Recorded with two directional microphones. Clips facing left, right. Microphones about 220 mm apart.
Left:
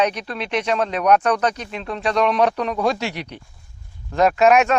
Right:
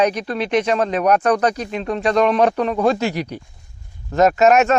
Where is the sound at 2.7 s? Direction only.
5° right (ahead or behind).